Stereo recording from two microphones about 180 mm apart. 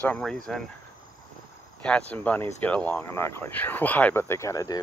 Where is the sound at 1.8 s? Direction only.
5° left (ahead or behind).